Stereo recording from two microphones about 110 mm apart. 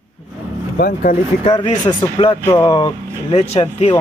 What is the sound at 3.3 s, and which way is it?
Speech, 70° left (ahead or behind).